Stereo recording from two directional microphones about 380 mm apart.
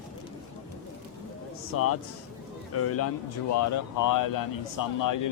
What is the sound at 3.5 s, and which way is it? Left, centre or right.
Speech, left.